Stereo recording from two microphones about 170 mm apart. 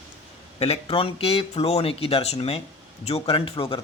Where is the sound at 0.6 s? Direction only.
35° left (ahead or behind).